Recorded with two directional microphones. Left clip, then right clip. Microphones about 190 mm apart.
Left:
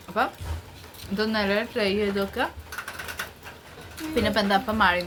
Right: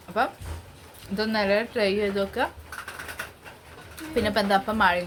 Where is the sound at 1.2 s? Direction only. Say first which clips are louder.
Right 1 dB; 15° right (ahead or behind).